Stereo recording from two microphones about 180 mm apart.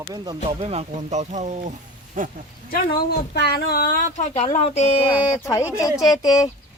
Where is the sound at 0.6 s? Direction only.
35° right (ahead or behind).